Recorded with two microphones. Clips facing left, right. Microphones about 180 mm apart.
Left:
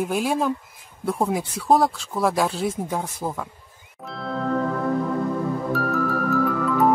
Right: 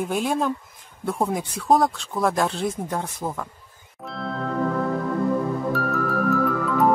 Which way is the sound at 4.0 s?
Centre (ahead or behind).